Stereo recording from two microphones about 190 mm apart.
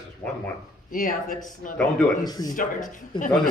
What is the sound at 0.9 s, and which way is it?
Speech, 45° left (ahead or behind).